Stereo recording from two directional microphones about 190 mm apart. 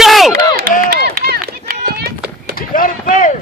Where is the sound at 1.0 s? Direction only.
55° right (ahead or behind).